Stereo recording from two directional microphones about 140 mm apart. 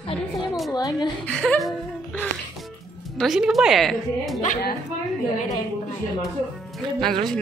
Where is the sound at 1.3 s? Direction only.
5° left (ahead or behind).